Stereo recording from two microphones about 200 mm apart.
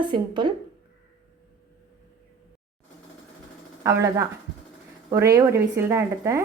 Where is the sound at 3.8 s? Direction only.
15° right (ahead or behind).